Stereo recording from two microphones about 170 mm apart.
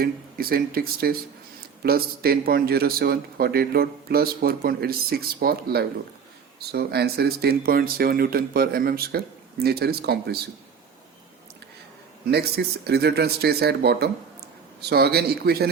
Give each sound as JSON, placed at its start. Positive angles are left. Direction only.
{"t": 0.0, "sound": "a man's voice", "side_deg": -60}
{"t": 12.2, "sound": "speech", "side_deg": -70}